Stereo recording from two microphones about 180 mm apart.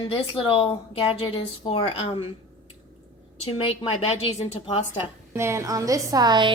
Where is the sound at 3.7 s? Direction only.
30° left (ahead or behind).